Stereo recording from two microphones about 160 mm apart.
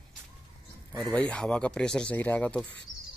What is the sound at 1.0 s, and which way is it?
Speech, 5° left (ahead or behind).